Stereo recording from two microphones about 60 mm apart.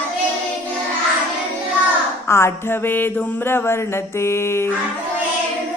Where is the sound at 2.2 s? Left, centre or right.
Left.